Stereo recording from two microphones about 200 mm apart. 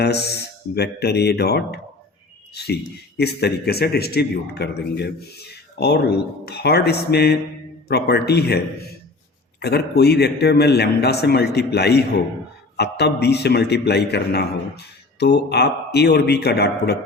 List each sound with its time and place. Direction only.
0.0 s a man's voice: 55° left (ahead or behind)
3.2 s a man's voice: 55° left (ahead or behind)
9.6 s a man's voice: 55° left (ahead or behind)